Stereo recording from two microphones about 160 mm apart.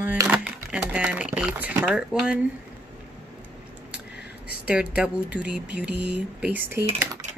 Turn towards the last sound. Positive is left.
turn(degrees=-15)  # may be behind; listen again after turning